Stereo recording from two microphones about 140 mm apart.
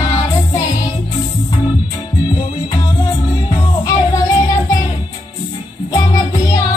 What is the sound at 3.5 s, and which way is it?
Music, 25° left (ahead or behind).